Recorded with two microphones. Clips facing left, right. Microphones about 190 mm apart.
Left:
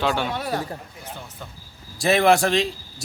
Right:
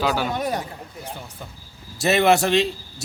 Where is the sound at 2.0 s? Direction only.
Centre (ahead or behind).